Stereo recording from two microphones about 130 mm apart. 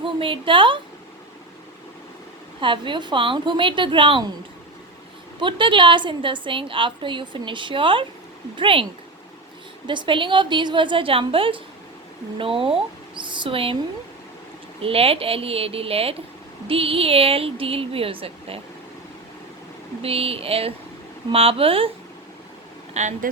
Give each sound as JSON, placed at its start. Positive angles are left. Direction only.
{"t": 0.0, "sound": "a woman's voice", "side_deg": -40}
{"t": 2.6, "sound": "a woman's voice", "side_deg": -40}
{"t": 5.4, "sound": "a woman's voice", "side_deg": -40}
{"t": 14.8, "sound": "a woman's voice", "side_deg": -45}
{"t": 20.0, "sound": "a woman's voice", "side_deg": -50}
{"t": 23.0, "sound": "speech", "side_deg": -65}